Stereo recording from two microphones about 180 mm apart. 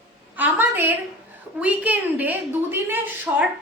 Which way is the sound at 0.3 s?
10° right (ahead or behind).